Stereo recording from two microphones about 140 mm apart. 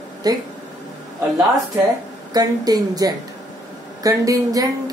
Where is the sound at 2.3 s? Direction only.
30° right (ahead or behind).